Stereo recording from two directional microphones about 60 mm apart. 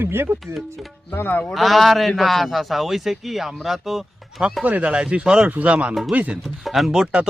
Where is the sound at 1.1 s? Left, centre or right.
Left.